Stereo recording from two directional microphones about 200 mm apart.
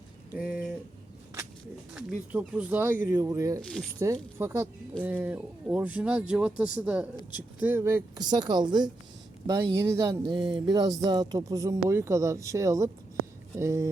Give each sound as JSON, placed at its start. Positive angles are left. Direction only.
{"t": 0.3, "sound": "speech", "side_deg": -5}
{"t": 1.9, "sound": "speech", "side_deg": -5}
{"t": 3.6, "sound": "speech", "side_deg": 5}
{"t": 4.0, "sound": "speech", "side_deg": -15}